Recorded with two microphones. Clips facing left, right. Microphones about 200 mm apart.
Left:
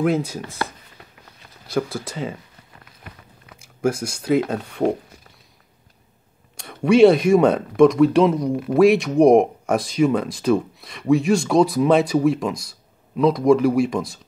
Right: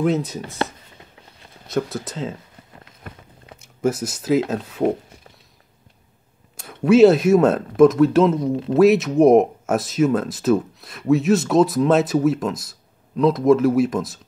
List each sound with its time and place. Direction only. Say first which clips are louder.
0.0 s speech: even; centre (ahead or behind)
1.7 s speech: even; centre (ahead or behind)
3.5 s a sound: right 5 dB; 30° right (ahead or behind)
3.8 s speech: even; centre (ahead or behind)
6.5 s speech: right 1 dB; 5° right (ahead or behind)